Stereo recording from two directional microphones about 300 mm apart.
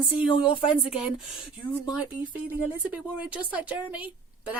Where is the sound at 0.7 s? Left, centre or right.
Centre.